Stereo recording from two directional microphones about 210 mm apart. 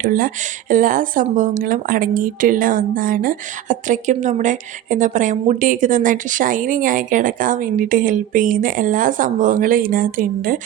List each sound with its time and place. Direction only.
0.0 s a woman's voice: 40° right (ahead or behind)